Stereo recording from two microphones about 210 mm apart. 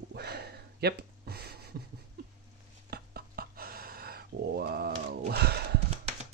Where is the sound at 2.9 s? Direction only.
45° right (ahead or behind).